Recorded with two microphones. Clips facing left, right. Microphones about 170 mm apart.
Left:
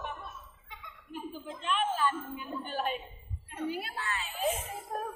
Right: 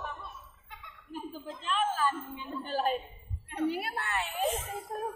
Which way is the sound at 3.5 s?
65° right (ahead or behind).